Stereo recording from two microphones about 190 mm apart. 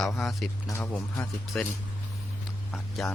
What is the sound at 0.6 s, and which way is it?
Speech, 10° left (ahead or behind).